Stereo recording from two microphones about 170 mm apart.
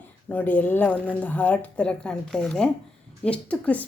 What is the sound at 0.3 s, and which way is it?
Speech, 10° left (ahead or behind).